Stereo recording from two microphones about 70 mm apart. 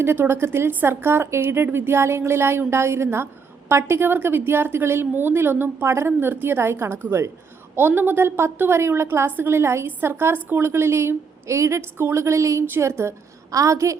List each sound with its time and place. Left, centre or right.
0.0 s a woman's voice: right